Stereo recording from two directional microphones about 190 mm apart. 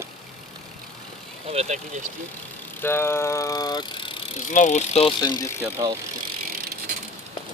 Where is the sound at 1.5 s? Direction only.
35° right (ahead or behind).